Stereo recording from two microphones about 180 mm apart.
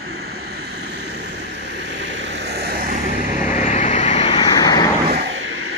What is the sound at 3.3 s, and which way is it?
Vehicle, 45° left (ahead or behind).